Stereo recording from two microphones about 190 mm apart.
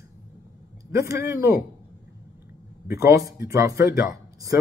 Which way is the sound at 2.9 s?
15° right (ahead or behind).